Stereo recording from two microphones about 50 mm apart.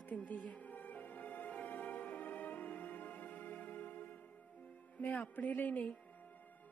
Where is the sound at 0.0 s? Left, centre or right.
Left.